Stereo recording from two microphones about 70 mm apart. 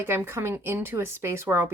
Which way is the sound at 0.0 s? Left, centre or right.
Right.